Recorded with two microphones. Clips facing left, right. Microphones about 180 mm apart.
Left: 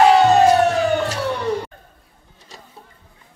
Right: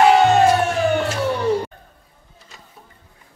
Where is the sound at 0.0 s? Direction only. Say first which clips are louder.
Left 1 dB; 35° left (ahead or behind).